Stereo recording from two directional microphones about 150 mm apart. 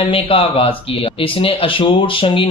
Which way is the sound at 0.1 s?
40° left (ahead or behind).